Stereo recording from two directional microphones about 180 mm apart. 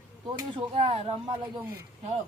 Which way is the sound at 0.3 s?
30° right (ahead or behind).